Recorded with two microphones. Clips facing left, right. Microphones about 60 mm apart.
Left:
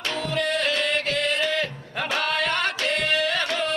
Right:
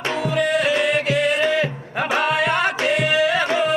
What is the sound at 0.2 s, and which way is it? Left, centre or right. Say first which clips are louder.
Music: right 5 dB; centre.